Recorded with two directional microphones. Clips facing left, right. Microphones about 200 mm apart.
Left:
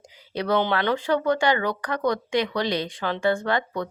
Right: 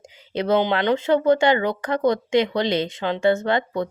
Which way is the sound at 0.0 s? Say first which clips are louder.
Right 4 dB; 25° right (ahead or behind).